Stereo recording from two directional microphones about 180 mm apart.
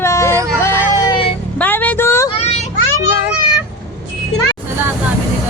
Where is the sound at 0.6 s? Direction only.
15° left (ahead or behind).